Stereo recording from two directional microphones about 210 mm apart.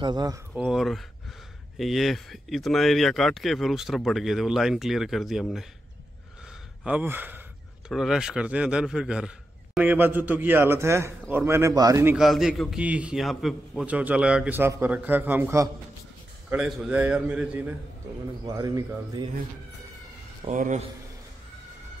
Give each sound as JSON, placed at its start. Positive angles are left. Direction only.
{"t": 0.0, "sound": "speech", "side_deg": -20}
{"t": 0.6, "sound": "speech", "side_deg": 0}
{"t": 6.8, "sound": "a man's voice", "side_deg": -5}
{"t": 20.4, "sound": "speech", "side_deg": -35}